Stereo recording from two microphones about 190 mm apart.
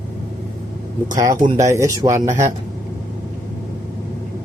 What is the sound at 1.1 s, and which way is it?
Speech, 20° right (ahead or behind).